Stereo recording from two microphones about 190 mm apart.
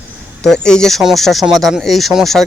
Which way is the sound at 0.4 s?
5° left (ahead or behind).